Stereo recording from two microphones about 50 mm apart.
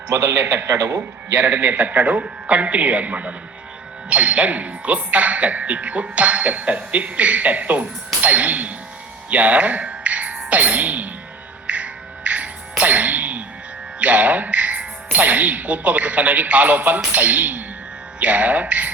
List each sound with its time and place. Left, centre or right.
0.1 s a man's voice: right
0.3 s a man's voice: right
1.3 s a man's voice: right
11.6 s music: right
14.0 s a man's voice: right